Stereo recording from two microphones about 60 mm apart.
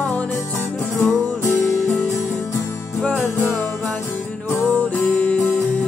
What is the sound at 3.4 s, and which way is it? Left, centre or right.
Music, left.